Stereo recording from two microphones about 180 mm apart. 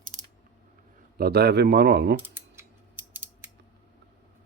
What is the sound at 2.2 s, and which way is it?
Mechanisms, 10° right (ahead or behind).